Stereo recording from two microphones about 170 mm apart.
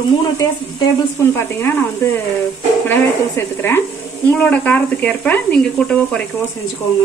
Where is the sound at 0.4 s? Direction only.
15° left (ahead or behind).